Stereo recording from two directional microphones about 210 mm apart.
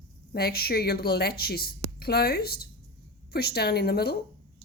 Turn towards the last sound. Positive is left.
turn(degrees=50)  # may be behind; listen again after turning